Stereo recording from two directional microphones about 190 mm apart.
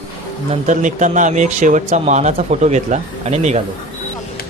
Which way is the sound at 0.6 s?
40° right (ahead or behind).